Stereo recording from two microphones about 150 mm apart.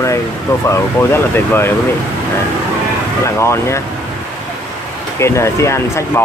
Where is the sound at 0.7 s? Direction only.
15° left (ahead or behind).